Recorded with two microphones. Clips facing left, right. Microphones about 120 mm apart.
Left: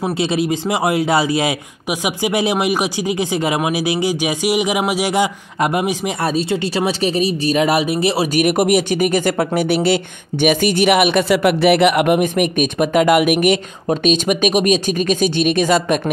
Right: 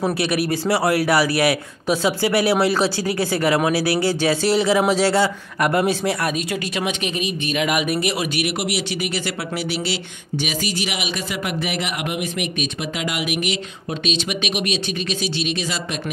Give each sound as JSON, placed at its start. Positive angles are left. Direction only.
{"t": 0.0, "sound": "a man's voice", "side_deg": 20}
{"t": 6.2, "sound": "speech", "side_deg": 30}
{"t": 8.4, "sound": "speech", "side_deg": 45}